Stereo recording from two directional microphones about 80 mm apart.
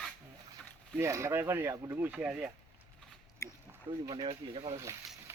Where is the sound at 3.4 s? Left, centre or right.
Left.